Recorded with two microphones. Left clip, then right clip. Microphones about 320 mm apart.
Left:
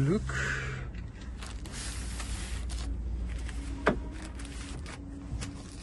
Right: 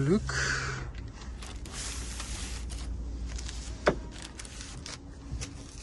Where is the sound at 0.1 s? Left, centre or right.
Right.